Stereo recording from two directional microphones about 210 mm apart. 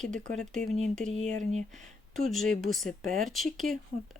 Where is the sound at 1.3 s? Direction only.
35° right (ahead or behind).